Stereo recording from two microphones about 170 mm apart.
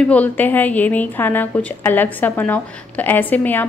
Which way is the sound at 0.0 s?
10° left (ahead or behind).